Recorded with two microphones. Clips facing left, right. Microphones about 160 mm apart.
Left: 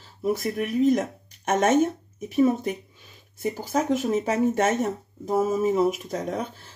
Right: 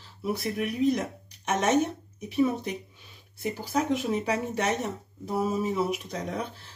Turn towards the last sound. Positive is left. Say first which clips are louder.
# left 4 dB
turn(degrees=45)  # may be behind; listen again after turning